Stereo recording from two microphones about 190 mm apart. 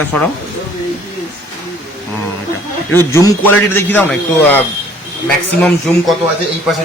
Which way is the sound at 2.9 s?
15° left (ahead or behind).